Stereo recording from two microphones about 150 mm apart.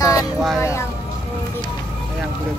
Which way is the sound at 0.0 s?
25° left (ahead or behind).